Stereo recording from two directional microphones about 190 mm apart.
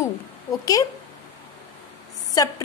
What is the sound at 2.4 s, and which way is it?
Speech, 20° left (ahead or behind).